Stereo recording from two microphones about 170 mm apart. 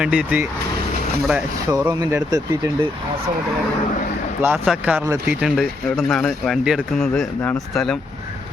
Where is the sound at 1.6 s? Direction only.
20° right (ahead or behind).